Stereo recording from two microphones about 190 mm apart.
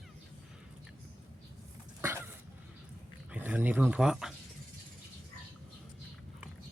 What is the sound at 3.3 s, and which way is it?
Speech, 10° right (ahead or behind).